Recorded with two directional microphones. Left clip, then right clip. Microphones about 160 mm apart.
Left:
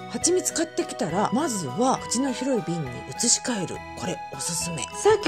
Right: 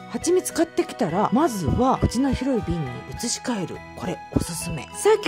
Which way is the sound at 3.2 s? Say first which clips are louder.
Left 3 dB; 15° right (ahead or behind).